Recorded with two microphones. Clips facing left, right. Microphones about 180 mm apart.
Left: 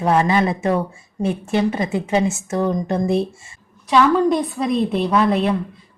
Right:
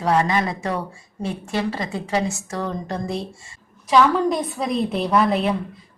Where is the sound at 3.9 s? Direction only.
Centre (ahead or behind).